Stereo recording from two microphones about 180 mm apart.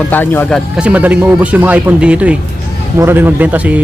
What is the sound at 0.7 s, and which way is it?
Speech, 5° right (ahead or behind).